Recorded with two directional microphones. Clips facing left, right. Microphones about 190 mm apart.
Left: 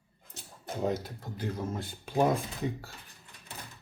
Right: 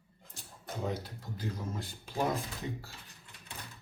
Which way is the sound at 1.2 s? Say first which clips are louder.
Left 4 dB; 55° left (ahead or behind).